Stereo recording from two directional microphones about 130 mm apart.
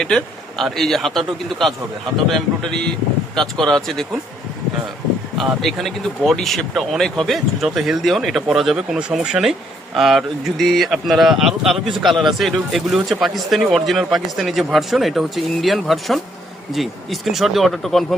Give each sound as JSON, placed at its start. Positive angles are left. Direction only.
{"t": 0.0, "sound": "speech", "side_deg": 5}
{"t": 5.4, "sound": "speech", "side_deg": 0}